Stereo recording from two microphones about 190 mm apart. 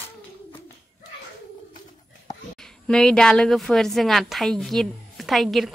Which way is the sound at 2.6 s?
5° left (ahead or behind).